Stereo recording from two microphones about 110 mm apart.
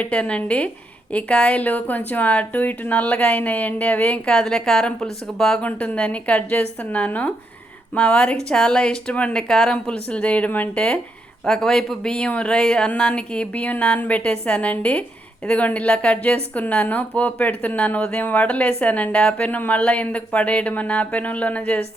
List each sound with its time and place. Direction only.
0.0 s speech: 10° left (ahead or behind)